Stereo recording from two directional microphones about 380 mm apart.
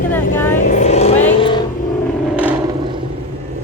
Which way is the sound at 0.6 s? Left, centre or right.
Centre.